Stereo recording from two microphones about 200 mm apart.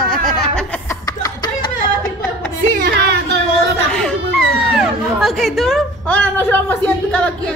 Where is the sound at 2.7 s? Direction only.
55° right (ahead or behind).